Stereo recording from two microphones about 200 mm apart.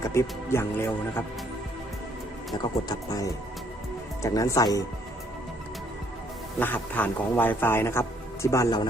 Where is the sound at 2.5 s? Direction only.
20° left (ahead or behind).